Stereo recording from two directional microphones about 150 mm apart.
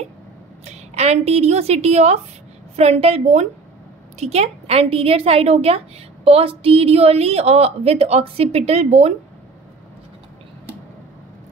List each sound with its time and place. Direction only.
0.7 s a woman's voice: 45° right (ahead or behind)